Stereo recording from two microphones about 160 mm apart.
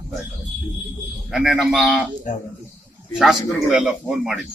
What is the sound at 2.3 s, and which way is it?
Speech, 50° left (ahead or behind).